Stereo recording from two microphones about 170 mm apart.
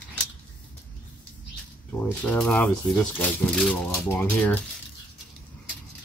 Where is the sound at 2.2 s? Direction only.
5° left (ahead or behind).